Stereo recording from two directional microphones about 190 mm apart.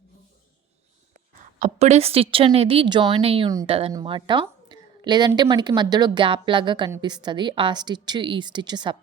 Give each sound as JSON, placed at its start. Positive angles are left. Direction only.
{"t": 1.5, "sound": "a woman's voice", "side_deg": -40}
{"t": 3.5, "sound": "a woman's voice", "side_deg": -20}